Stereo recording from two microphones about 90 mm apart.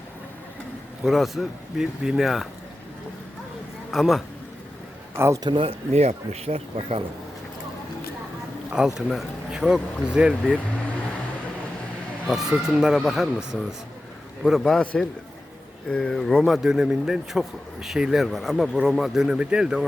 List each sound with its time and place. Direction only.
1.0 s speech: centre (ahead or behind)
3.9 s speech: centre (ahead or behind)
5.1 s a man's voice: 30° right (ahead or behind)
5.4 s speech: 65° right (ahead or behind)
6.5 s speech: 90° right
8.7 s speech: 5° right (ahead or behind)
12.3 s speech: 5° right (ahead or behind)
16.6 s speech: 5° right (ahead or behind)